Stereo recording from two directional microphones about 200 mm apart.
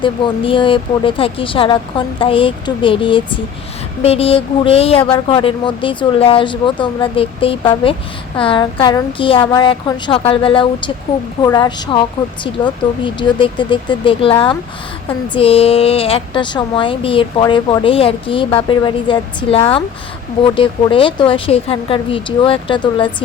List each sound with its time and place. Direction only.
0.0 s speech: 25° left (ahead or behind)